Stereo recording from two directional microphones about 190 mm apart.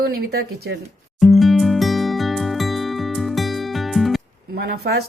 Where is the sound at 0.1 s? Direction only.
55° right (ahead or behind).